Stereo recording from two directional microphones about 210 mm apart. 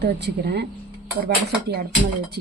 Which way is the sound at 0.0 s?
50° right (ahead or behind).